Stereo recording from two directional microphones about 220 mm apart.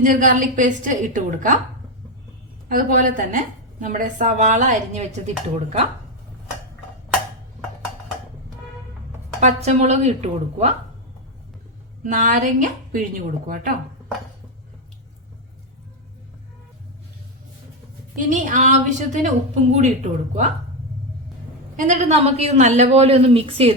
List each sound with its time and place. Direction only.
0.0 s a woman's voice: 40° right (ahead or behind)
2.6 s a woman's voice: 40° right (ahead or behind)
9.4 s a woman's voice: 30° right (ahead or behind)
12.0 s a woman's voice: 35° right (ahead or behind)
18.2 s a woman's voice: 35° right (ahead or behind)
21.8 s a woman's voice: 35° right (ahead or behind)